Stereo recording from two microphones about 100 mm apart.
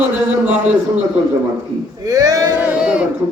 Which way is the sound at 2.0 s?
35° right (ahead or behind).